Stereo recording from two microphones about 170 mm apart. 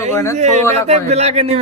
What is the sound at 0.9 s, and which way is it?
Speech, 40° right (ahead or behind).